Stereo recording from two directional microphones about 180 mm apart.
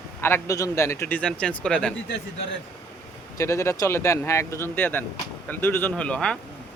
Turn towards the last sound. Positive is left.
turn(degrees=5)  # may be behind; listen again after turning